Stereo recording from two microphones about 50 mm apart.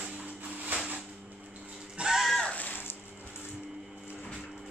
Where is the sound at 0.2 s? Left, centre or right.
Right.